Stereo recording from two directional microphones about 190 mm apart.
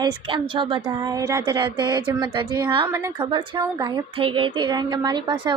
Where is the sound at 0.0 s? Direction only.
25° right (ahead or behind).